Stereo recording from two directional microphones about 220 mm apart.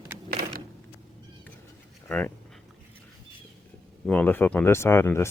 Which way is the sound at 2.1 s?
5° left (ahead or behind).